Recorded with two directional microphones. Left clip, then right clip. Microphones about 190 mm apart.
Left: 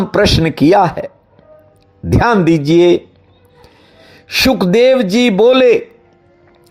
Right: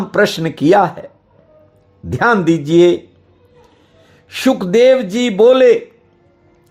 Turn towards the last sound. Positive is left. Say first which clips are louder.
# even
turn(degrees=15)  # may be behind; listen again after turning